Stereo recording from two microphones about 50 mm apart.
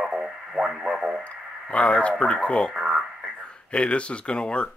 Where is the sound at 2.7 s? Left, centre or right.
Centre.